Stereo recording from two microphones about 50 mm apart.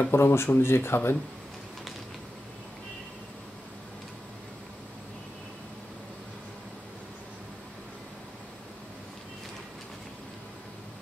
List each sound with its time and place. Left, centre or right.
0.1 s speech: left